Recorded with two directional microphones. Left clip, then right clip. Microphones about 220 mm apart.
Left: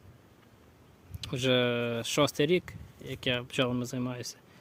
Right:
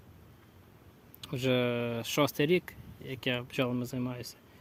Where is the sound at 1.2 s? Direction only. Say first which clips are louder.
Left 3 dB; 10° left (ahead or behind).